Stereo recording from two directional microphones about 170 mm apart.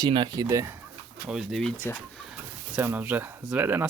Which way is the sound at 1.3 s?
Centre (ahead or behind).